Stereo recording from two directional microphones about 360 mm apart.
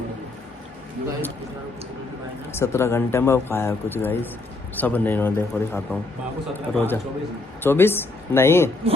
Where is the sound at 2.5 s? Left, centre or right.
Centre.